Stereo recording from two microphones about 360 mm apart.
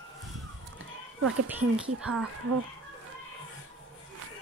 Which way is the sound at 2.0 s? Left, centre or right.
Centre.